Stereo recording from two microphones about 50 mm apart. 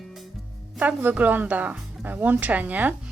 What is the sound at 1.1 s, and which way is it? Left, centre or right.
Speech, right.